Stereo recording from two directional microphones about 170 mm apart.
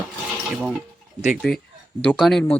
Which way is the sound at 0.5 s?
5° right (ahead or behind).